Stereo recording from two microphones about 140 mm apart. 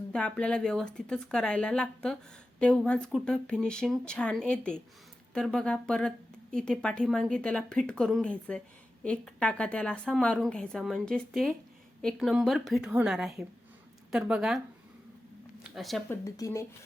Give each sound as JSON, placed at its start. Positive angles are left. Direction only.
{"t": 0.1, "sound": "a woman's voice", "side_deg": 5}
{"t": 15.6, "sound": "speech", "side_deg": 0}
{"t": 16.0, "sound": "speech", "side_deg": 20}